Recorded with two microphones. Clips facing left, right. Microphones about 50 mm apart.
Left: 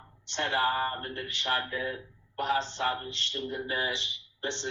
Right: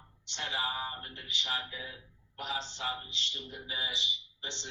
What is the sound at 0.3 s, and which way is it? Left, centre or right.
Speech, left.